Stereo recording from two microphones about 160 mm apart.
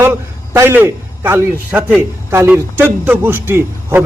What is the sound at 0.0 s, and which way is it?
A man's voice, 15° right (ahead or behind).